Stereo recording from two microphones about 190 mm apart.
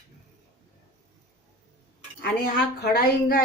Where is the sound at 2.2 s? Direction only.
60° left (ahead or behind).